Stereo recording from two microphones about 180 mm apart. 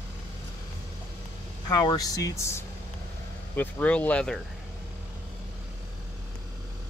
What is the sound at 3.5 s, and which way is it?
Speech, 10° left (ahead or behind).